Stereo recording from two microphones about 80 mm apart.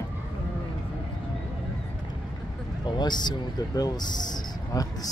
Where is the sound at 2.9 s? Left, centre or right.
Left.